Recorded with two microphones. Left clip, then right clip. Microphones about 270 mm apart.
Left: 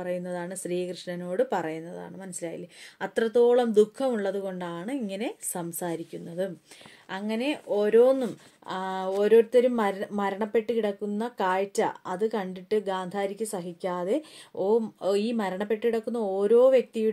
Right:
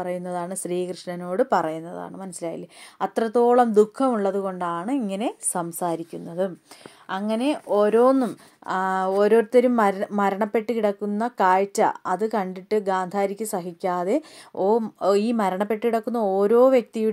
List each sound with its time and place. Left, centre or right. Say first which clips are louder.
0.0 s speech: right 4 dB; right